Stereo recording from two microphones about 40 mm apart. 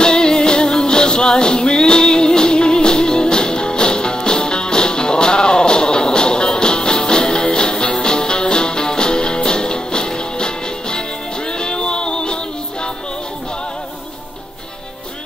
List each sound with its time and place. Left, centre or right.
0.0 s music: centre